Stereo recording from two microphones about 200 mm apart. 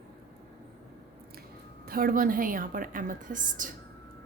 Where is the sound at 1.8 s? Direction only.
45° right (ahead or behind).